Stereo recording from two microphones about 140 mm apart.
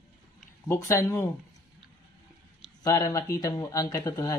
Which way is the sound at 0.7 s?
20° left (ahead or behind).